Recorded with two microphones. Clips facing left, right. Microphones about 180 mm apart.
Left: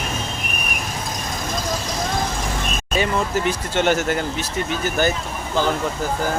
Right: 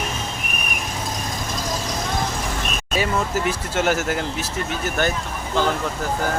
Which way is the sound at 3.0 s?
5° right (ahead or behind).